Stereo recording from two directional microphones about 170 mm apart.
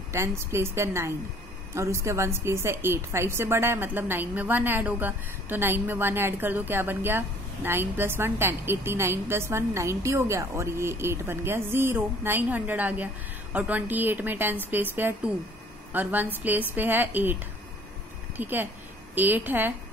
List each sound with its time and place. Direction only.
0.1 s a woman's voice: 15° right (ahead or behind)
18.4 s a woman's voice: 10° right (ahead or behind)